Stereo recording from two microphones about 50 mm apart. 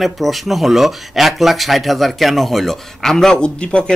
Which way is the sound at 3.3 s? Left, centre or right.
Centre.